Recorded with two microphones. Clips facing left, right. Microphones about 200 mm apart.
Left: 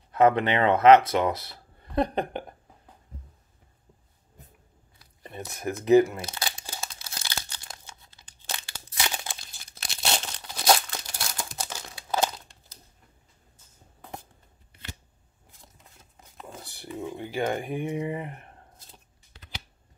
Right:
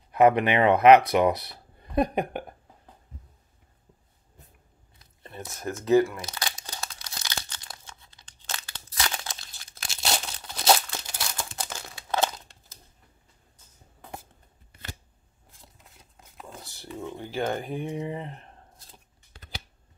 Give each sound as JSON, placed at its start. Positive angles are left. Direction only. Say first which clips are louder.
{"t": 0.1, "sound": "speech", "louder": "right 1 dB", "side_deg": -15}
{"t": 5.5, "sound": "speech", "louder": "left 2 dB", "side_deg": 15}
{"t": 6.6, "sound": "tearing", "louder": "even", "side_deg": 10}
{"t": 8.2, "sound": "crumpling", "louder": "left 1 dB", "side_deg": 10}
{"t": 16.6, "sound": "a sound", "louder": "left 2 dB", "side_deg": 15}
{"t": 17.2, "sound": "speech", "louder": "even", "side_deg": 10}
{"t": 19.3, "sound": "a sound", "louder": "right 2 dB", "side_deg": -45}